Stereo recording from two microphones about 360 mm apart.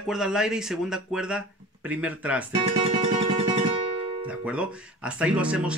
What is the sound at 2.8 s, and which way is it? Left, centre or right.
Music, centre.